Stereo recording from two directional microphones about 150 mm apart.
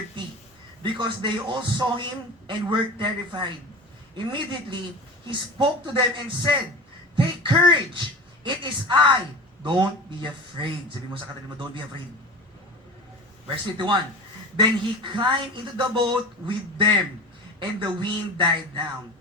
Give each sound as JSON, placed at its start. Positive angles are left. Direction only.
{"t": 0.8, "sound": "a man's voice", "side_deg": -35}
{"t": 14.5, "sound": "a man's voice", "side_deg": -30}